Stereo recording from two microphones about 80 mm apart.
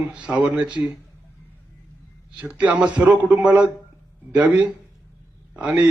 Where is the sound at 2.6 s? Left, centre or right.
Centre.